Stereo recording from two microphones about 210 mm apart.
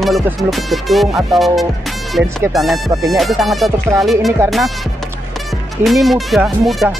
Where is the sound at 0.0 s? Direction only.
Centre (ahead or behind).